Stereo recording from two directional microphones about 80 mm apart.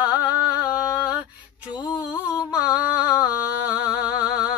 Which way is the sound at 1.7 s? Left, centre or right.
Left.